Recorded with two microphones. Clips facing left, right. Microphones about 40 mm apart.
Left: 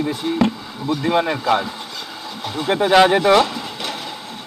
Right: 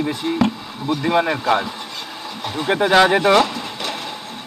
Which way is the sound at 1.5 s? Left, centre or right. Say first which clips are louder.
Even; right.